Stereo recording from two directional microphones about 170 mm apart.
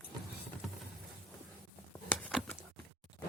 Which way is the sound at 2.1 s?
5° left (ahead or behind).